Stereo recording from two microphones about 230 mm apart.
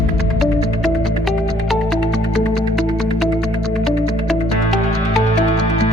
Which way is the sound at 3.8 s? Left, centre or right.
Centre.